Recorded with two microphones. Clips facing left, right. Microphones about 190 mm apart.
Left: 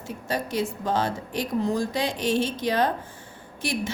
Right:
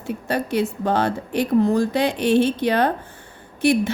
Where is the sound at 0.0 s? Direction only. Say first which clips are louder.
Right 5 dB; 60° right (ahead or behind).